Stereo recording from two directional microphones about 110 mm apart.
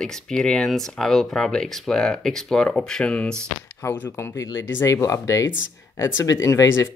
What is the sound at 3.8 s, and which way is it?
Speech, 25° left (ahead or behind).